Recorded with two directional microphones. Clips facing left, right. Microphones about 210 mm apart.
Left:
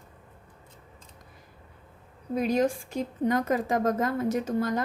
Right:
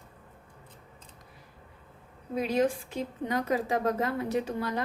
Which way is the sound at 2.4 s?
45° left (ahead or behind).